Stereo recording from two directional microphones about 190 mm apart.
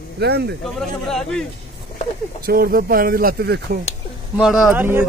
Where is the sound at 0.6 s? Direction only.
Centre (ahead or behind).